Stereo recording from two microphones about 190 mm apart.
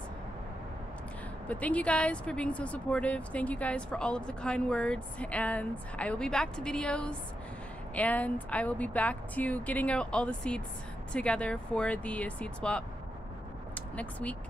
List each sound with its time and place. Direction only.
1.5 s speech: 5° left (ahead or behind)